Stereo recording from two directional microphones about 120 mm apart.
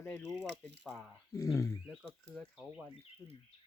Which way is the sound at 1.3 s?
25° left (ahead or behind).